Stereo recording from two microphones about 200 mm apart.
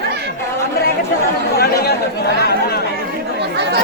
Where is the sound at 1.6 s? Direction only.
55° left (ahead or behind).